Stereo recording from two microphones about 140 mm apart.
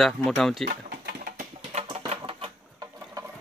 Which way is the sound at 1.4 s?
50° right (ahead or behind).